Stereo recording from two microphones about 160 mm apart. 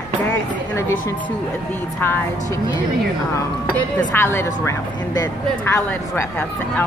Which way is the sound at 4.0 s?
15° left (ahead or behind).